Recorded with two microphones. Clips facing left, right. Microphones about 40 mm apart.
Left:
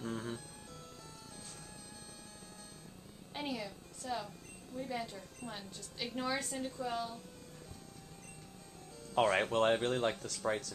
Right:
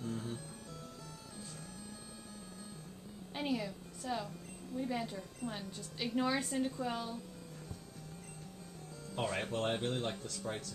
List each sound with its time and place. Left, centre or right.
0.0 s music: left
3.3 s music: centre
4.7 s a woman's voice: centre
9.1 s speech: left
10.2 s speech: left